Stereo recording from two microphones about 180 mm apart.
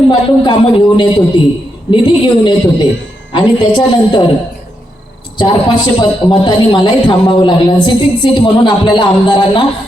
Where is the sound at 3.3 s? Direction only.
25° left (ahead or behind).